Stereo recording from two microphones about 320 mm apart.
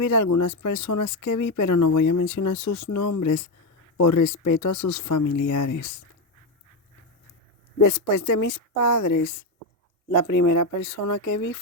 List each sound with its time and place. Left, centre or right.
0.0 s speech: left
7.8 s speech: left